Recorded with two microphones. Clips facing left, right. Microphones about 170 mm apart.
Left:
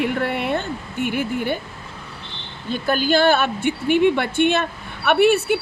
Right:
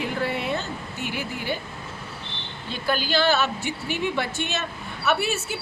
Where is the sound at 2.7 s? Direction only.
50° left (ahead or behind).